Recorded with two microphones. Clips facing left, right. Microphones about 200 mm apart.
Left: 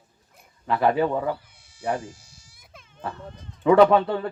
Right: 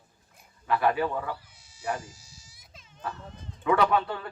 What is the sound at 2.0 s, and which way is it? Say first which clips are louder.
Baby cry: left 8 dB; 55° left (ahead or behind).